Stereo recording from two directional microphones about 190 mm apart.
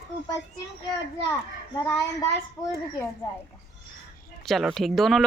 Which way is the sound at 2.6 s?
Centre (ahead or behind).